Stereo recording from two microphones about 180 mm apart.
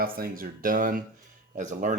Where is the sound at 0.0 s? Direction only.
55° right (ahead or behind).